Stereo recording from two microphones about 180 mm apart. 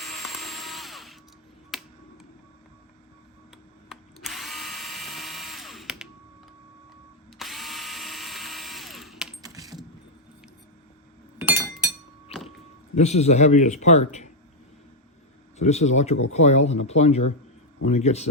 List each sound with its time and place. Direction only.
0.0 s drill: centre (ahead or behind)
1.7 s finger snapping: centre (ahead or behind)
3.8 s drill: centre (ahead or behind)
7.3 s drill: centre (ahead or behind)
9.4 s coin: 20° right (ahead or behind)
11.3 s chink: 15° right (ahead or behind)
13.0 s speech: 40° left (ahead or behind)
15.5 s speech: 40° left (ahead or behind)